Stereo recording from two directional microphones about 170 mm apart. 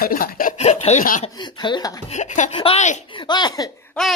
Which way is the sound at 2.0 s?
45° left (ahead or behind).